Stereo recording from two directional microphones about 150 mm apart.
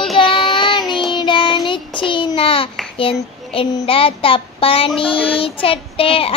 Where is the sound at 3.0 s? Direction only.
35° left (ahead or behind).